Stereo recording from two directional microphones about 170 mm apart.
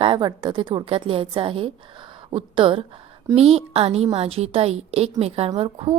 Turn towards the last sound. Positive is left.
turn(degrees=-35)  # may be behind; listen again after turning